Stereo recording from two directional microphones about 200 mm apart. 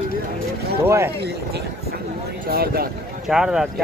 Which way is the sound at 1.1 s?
55° right (ahead or behind).